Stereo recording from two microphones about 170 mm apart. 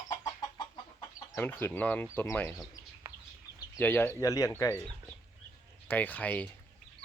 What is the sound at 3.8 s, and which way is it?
Speech, 10° left (ahead or behind).